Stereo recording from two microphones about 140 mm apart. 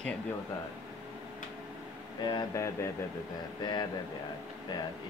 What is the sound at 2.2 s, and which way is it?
Speech, 30° left (ahead or behind).